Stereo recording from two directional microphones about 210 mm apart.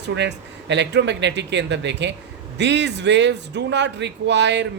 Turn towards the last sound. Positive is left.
turn(degrees=-55)  # may be behind; listen again after turning